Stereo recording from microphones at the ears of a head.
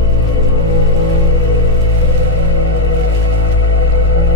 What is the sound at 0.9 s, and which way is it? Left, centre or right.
Music, left.